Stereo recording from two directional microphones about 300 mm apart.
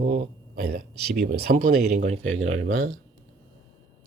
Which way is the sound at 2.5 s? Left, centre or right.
Right.